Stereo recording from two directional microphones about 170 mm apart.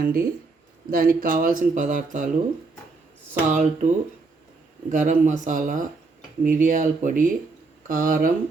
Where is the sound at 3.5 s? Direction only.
45° right (ahead or behind).